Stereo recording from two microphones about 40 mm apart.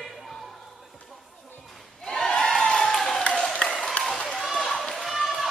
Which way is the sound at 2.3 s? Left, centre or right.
Centre.